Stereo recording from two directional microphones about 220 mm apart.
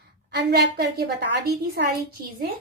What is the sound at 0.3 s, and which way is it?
Child singing, 50° right (ahead or behind).